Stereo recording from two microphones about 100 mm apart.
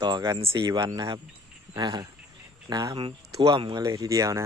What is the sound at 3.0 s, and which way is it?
Speech, 60° right (ahead or behind).